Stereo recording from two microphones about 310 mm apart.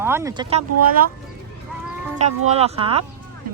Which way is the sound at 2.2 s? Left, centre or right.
Centre.